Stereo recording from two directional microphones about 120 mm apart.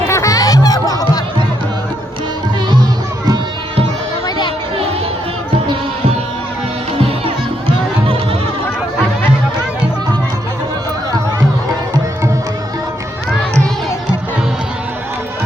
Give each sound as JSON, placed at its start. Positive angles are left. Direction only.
{"t": 0.1, "sound": "music", "side_deg": 25}
{"t": 7.0, "sound": "music", "side_deg": -50}